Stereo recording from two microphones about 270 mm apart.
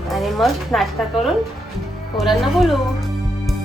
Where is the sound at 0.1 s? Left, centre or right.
Centre.